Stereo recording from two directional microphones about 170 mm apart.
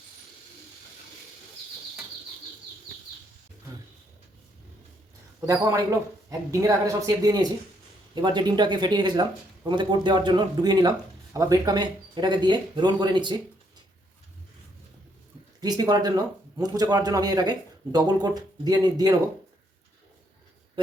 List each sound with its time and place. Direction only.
5.5 s speech: 20° right (ahead or behind)
15.6 s speech: 25° right (ahead or behind)